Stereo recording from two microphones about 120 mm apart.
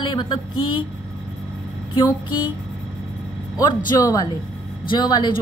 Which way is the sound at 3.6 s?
30° left (ahead or behind).